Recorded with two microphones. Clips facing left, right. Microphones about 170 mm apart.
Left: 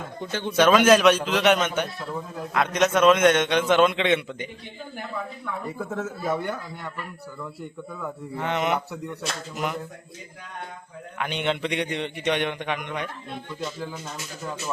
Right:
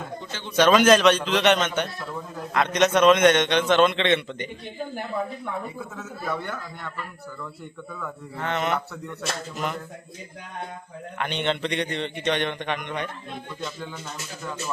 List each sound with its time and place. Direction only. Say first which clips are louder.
0.2 s speech: left 7 dB; 55° left (ahead or behind)
0.5 s a man's voice: even; 5° left (ahead or behind)
5.8 s speech: left 7 dB; 50° left (ahead or behind)
6.2 s a man's voice: left 1 dB; 15° left (ahead or behind)
7.9 s a man's voice: left 2 dB; 15° left (ahead or behind)
11.2 s a man's voice: even; 5° left (ahead or behind)